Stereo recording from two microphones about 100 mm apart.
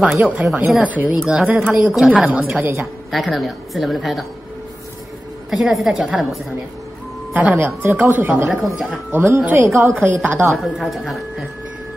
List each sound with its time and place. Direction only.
0.0 s speech: 15° right (ahead or behind)
3.1 s a woman's voice: centre (ahead or behind)
5.5 s a woman's voice: centre (ahead or behind)
7.3 s speech: 15° right (ahead or behind)
8.5 s a woman's voice: centre (ahead or behind)
9.1 s speech: 25° right (ahead or behind)
10.6 s a woman's voice: centre (ahead or behind)